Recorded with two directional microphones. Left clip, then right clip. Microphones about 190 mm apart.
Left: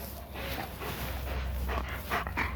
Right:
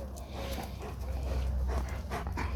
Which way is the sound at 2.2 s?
15° left (ahead or behind).